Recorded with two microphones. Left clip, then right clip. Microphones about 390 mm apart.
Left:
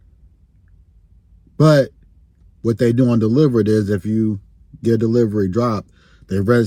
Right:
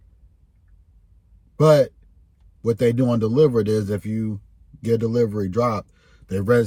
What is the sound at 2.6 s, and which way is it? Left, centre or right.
Speech, centre.